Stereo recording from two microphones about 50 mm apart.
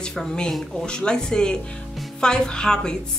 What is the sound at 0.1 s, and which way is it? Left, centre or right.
Speech, centre.